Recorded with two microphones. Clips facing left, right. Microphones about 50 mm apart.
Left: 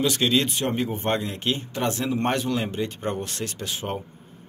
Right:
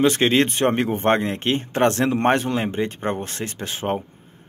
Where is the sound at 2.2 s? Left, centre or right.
Right.